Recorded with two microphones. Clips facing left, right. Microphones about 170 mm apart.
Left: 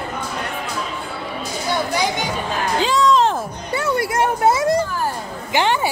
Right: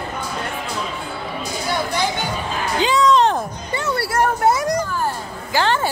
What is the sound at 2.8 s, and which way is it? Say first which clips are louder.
Music: right 1 dB; centre (ahead or behind).